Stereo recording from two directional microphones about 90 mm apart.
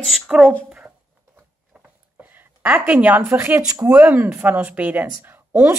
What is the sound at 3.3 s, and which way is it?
A woman's voice, 25° right (ahead or behind).